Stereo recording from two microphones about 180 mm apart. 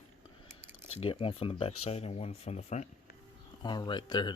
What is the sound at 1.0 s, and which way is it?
Speech, 30° left (ahead or behind).